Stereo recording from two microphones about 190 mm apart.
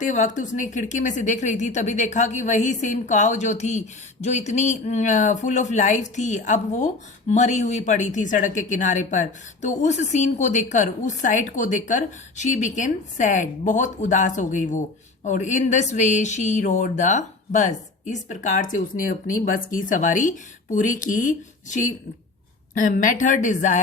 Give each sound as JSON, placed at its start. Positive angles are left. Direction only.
{"t": 0.0, "sound": "a woman's voice", "side_deg": 40}